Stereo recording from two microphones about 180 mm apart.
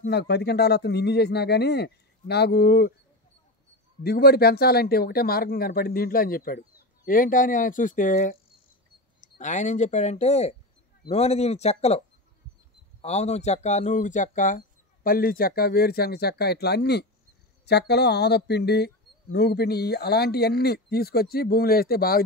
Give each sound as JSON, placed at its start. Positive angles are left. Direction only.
{"t": 0.0, "sound": "speech", "side_deg": 65}
{"t": 4.0, "sound": "speech", "side_deg": 60}
{"t": 13.0, "sound": "speech", "side_deg": 35}